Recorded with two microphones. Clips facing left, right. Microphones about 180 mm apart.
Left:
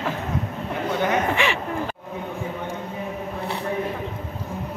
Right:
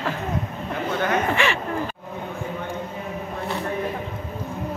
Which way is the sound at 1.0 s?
15° left (ahead or behind).